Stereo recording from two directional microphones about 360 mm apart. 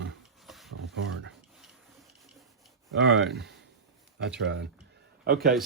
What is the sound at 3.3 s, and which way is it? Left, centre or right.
A man's voice, right.